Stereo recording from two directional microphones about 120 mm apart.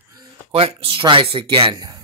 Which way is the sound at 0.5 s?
50° right (ahead or behind).